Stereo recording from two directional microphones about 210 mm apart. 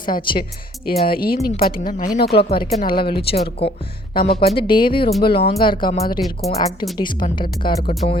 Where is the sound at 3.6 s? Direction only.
25° left (ahead or behind).